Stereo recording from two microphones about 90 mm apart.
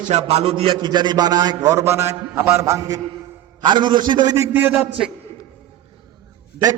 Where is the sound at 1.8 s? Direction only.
30° right (ahead or behind).